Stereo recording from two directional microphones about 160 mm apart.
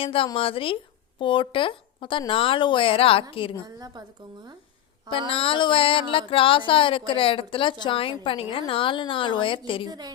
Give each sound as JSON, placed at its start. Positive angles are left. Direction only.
{"t": 0.0, "sound": "speech", "side_deg": 35}
{"t": 3.8, "sound": "a woman's voice", "side_deg": -25}
{"t": 5.3, "sound": "speech", "side_deg": 35}
{"t": 9.8, "sound": "a woman's voice", "side_deg": -25}